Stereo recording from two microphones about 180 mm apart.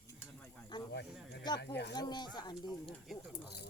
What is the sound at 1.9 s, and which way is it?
Speech, 25° left (ahead or behind).